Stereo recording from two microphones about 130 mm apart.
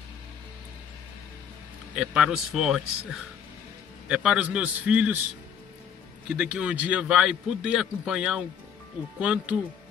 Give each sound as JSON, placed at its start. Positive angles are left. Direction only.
{"t": 2.0, "sound": "a man's voice", "side_deg": -5}
{"t": 6.2, "sound": "a man's voice", "side_deg": -10}